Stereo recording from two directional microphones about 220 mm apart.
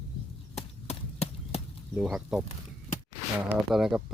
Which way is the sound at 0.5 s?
30° left (ahead or behind).